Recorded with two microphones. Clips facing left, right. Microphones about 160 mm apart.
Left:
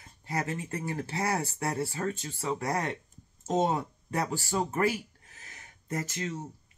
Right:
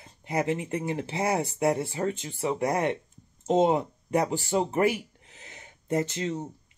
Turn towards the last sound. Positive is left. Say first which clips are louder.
# right 6 dB
turn(degrees=-25)  # may be behind; listen again after turning